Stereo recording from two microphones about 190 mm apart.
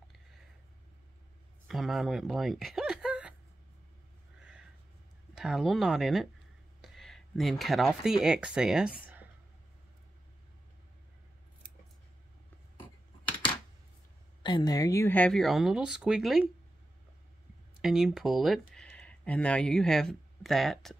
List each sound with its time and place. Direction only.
1.7 s speech: centre (ahead or behind)
5.3 s speech: centre (ahead or behind)
14.4 s speech: 25° left (ahead or behind); by 16.4 s centre (ahead or behind)
17.8 s speech: centre (ahead or behind)